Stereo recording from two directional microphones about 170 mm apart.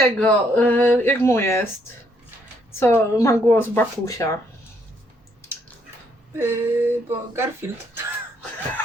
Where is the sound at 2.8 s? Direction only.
15° left (ahead or behind).